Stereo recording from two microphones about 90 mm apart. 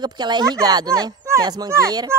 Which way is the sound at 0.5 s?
40° right (ahead or behind).